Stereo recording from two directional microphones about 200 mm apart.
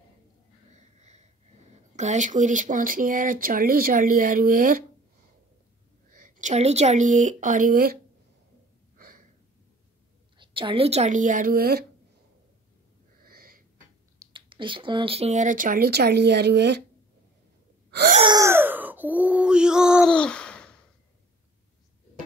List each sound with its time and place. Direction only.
2.0 s speech: 35° right (ahead or behind)
6.1 s speech: 40° right (ahead or behind)
8.9 s gasp: 45° right (ahead or behind)
10.3 s speech: 25° right (ahead or behind); by 11.8 s 50° right (ahead or behind)
13.2 s wheeze: 50° right (ahead or behind)
14.2 s speech: 25° right (ahead or behind); by 16.8 s 55° right (ahead or behind)
18.2 s a sound: 15° right (ahead or behind); by 20.7 s 5° left (ahead or behind)